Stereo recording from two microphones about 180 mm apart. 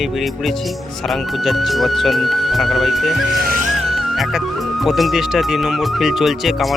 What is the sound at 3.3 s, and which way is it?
Music, 55° right (ahead or behind).